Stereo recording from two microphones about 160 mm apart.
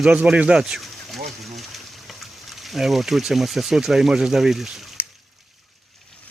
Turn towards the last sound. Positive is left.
turn(degrees=15)  # may be behind; listen again after turning